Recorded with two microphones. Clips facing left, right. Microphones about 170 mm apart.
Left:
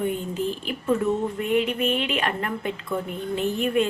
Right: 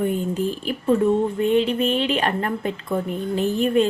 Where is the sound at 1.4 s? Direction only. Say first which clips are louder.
Right 4 dB; 30° right (ahead or behind).